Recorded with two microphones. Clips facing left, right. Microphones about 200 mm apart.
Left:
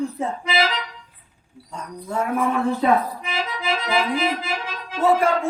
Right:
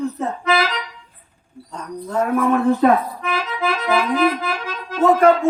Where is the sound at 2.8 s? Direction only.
50° right (ahead or behind).